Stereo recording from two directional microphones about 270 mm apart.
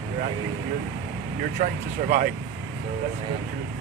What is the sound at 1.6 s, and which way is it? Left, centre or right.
Speech, right.